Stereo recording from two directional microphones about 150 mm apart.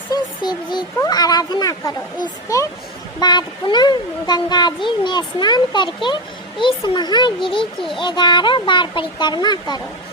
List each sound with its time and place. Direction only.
0.1 s music: 30° left (ahead or behind)
0.9 s speech: 25° left (ahead or behind)